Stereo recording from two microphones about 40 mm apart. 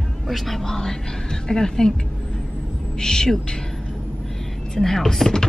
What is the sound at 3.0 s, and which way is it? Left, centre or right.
Speech, centre.